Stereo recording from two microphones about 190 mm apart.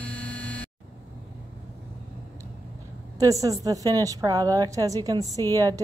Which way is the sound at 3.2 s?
15° right (ahead or behind).